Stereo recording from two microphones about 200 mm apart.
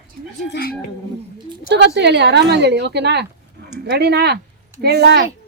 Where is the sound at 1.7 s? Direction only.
60° right (ahead or behind).